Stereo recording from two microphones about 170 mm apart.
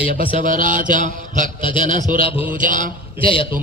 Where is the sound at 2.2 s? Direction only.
35° left (ahead or behind).